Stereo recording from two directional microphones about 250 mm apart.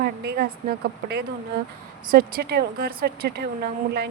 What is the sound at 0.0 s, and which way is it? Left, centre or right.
Speech, right.